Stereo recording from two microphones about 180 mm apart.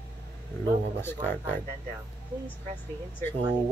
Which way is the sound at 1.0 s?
10° left (ahead or behind).